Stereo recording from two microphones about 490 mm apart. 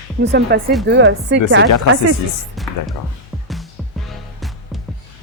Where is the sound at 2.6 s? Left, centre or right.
Centre.